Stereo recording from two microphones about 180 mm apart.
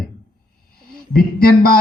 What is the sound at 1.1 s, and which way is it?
Speech, 55° left (ahead or behind).